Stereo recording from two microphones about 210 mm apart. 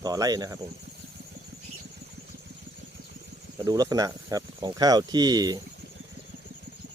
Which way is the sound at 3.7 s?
15° right (ahead or behind).